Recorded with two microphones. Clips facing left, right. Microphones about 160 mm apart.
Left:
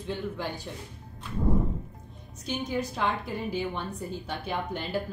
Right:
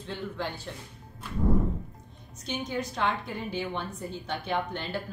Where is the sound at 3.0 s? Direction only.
5° left (ahead or behind).